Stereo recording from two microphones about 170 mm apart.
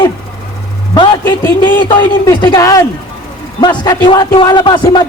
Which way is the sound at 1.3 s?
25° left (ahead or behind).